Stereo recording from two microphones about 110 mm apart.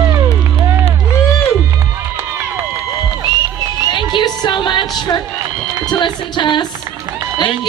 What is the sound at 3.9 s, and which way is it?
Music, 40° left (ahead or behind).